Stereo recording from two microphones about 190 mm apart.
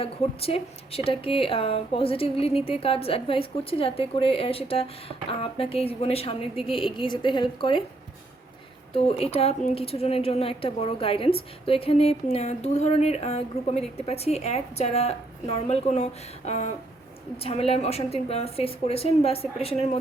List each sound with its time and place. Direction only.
0.0 s a woman's voice: 30° left (ahead or behind)
8.9 s a woman's voice: 30° left (ahead or behind)